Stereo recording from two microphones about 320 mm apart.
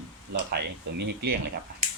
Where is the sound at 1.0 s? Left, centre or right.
Right.